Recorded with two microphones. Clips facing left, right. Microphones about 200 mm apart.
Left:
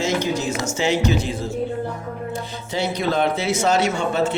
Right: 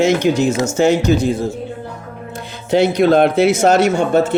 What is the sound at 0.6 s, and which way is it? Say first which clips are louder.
Speech: right 5 dB; 45° right (ahead or behind).